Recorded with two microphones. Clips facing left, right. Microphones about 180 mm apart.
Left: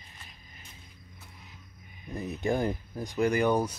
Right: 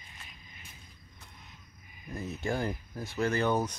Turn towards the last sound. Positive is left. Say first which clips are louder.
# left 3 dB
turn(degrees=10)  # may be behind; listen again after turning